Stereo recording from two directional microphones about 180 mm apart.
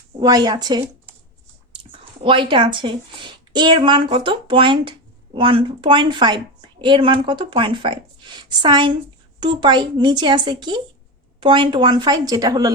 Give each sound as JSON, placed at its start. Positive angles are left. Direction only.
{"t": 0.2, "sound": "a woman's voice", "side_deg": -20}